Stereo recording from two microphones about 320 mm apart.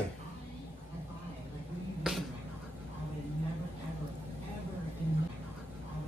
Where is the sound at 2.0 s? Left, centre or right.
Centre.